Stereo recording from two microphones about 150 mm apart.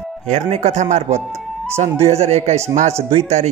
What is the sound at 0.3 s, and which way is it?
Speech, 50° right (ahead or behind).